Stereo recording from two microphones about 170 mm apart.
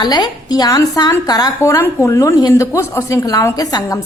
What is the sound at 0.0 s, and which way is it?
A woman's voice, 25° left (ahead or behind).